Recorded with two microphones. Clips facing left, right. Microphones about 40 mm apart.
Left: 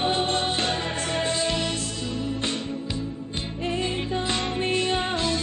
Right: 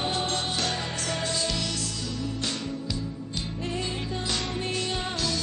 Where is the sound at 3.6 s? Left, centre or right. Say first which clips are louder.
Left 6 dB; left.